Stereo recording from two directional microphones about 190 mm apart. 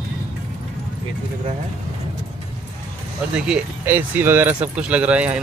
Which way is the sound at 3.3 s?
5° right (ahead or behind).